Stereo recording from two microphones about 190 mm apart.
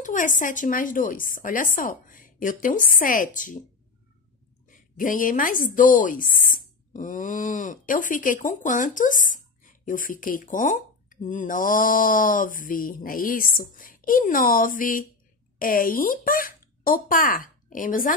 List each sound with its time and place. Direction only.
0.0 s speech: 45° left (ahead or behind)
4.6 s speech: 45° left (ahead or behind)